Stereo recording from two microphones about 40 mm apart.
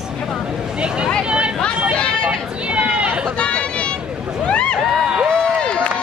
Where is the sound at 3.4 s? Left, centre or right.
Left.